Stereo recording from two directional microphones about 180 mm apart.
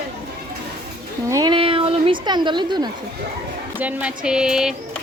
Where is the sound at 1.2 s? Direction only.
20° right (ahead or behind).